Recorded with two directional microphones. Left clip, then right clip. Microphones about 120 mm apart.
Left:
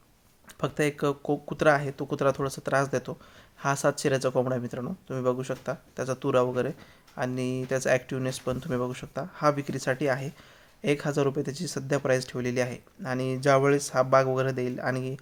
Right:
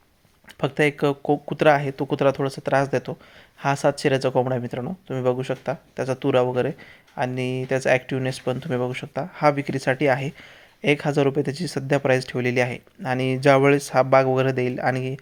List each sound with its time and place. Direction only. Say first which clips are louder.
0.6 s speech: right 6 dB; 15° right (ahead or behind)